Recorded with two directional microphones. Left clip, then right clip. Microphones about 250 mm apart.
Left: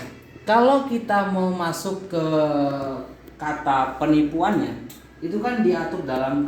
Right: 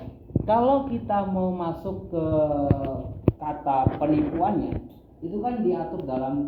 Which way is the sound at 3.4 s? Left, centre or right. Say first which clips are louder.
Left 5 dB; left.